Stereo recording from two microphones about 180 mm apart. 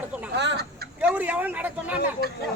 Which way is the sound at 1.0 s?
10° right (ahead or behind).